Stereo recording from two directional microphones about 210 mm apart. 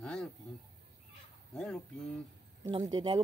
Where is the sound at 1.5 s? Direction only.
5° left (ahead or behind).